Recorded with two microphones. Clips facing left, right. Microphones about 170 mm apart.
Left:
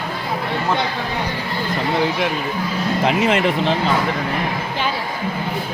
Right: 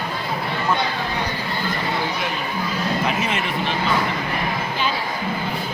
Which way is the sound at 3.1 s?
90° left.